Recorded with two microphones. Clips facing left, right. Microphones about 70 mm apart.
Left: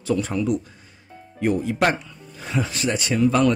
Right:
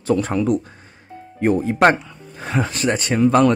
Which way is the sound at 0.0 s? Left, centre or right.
Right.